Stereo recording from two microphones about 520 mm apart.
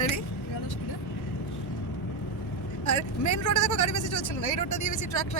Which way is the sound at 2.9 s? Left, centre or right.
Left.